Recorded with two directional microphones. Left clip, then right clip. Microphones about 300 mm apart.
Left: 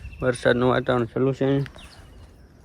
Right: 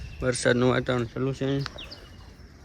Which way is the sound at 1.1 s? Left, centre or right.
Centre.